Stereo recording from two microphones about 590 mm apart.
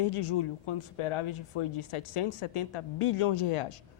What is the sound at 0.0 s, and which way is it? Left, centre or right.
Speech, left.